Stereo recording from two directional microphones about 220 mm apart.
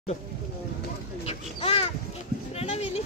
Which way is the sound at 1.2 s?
25° left (ahead or behind).